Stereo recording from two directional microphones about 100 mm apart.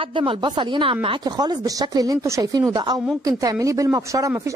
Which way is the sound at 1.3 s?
40° right (ahead or behind).